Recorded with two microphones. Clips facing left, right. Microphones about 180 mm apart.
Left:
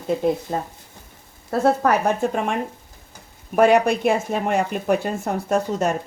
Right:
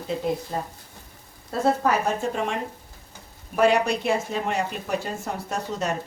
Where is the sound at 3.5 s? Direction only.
50° left (ahead or behind).